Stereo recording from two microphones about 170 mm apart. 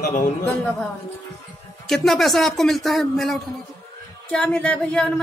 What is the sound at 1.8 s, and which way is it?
A woman's voice, centre (ahead or behind).